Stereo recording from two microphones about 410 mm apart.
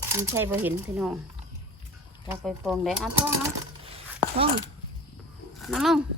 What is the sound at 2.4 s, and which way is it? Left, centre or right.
Speech, centre.